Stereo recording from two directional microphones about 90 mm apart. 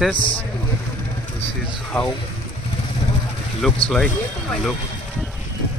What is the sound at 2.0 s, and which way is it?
Speech, 15° left (ahead or behind).